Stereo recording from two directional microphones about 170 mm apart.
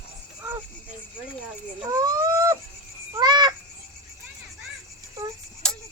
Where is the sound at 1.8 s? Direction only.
20° right (ahead or behind).